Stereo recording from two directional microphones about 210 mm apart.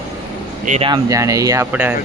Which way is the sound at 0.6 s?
30° right (ahead or behind).